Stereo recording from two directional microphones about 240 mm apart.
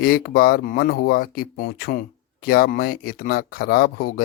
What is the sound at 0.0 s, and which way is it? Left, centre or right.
Speech, left.